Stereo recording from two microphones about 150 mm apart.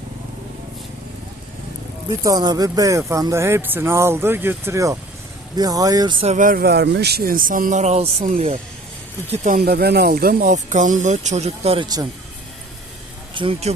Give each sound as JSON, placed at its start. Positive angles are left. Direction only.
{"t": 2.0, "sound": "speech", "side_deg": -25}
{"t": 6.2, "sound": "speech", "side_deg": -60}
{"t": 9.6, "sound": "speech", "side_deg": -90}
{"t": 13.3, "sound": "speech", "side_deg": -35}